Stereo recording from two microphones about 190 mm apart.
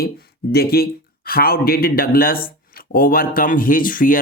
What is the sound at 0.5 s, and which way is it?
Speech, 55° left (ahead or behind).